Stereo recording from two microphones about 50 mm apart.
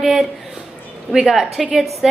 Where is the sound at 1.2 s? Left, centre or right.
Centre.